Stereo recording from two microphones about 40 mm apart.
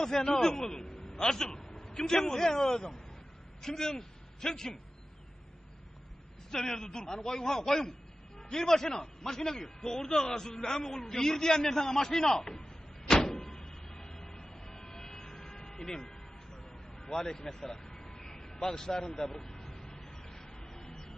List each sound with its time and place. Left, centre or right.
0.0 s a man's voice: centre
6.5 s a man's voice: centre
13.1 s vehicle: centre